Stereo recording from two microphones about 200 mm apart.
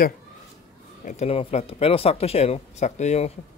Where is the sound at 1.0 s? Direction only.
35° left (ahead or behind).